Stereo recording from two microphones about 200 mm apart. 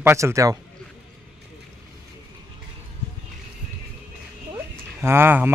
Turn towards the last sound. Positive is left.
turn(degrees=-10)  # may be behind; listen again after turning